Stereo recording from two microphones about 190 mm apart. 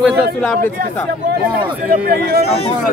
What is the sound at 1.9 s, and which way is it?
Speech, 50° right (ahead or behind).